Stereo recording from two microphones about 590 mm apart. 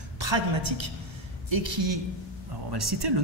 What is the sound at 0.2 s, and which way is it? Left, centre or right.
Speech, right.